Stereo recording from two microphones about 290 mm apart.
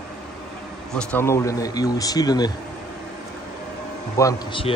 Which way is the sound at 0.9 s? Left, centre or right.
Centre.